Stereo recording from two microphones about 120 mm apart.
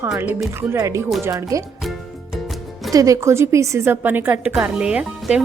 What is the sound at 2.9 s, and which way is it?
A woman's voice, 30° right (ahead or behind).